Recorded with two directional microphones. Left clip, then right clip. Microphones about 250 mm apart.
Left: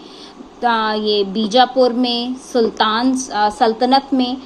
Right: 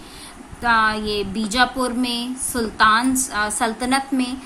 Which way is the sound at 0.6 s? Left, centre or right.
Centre.